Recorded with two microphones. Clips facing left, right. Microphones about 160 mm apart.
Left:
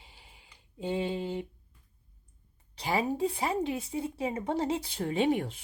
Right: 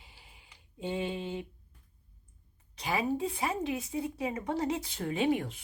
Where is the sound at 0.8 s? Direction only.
35° left (ahead or behind).